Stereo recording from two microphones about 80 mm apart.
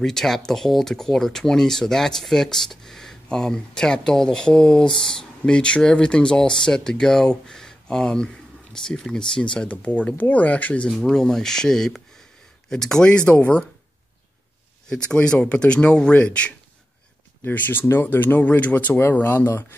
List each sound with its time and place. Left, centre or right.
0.0 s speech: centre
10.9 s speech: centre
14.9 s speech: centre
17.4 s speech: left